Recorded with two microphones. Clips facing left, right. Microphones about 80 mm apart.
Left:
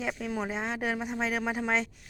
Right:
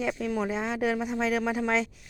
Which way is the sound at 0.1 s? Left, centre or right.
Centre.